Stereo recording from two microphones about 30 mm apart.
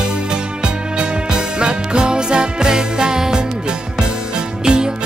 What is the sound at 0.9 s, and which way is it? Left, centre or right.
Music, right.